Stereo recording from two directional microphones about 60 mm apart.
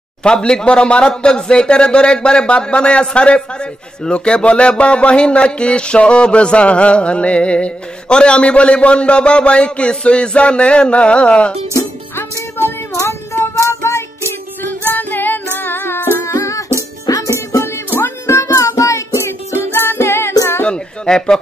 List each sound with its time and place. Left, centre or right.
0.2 s speech: centre
12.9 s child singing: left
14.6 s music: left
17.0 s music: left
17.3 s music: left
20.6 s a sound: centre